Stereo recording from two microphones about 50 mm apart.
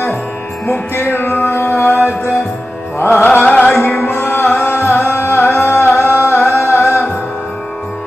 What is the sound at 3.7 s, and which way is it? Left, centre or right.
Music, left.